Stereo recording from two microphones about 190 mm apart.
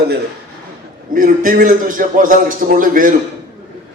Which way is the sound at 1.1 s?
45° right (ahead or behind).